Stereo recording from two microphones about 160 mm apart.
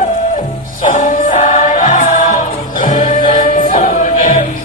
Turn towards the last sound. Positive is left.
turn(degrees=55)  # may be behind; listen again after turning